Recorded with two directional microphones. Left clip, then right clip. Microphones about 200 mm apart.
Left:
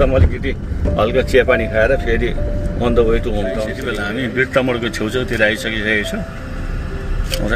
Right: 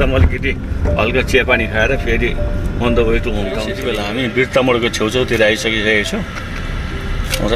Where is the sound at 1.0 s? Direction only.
10° right (ahead or behind).